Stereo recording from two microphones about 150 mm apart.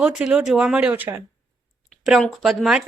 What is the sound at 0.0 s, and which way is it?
A woman's voice, 5° right (ahead or behind).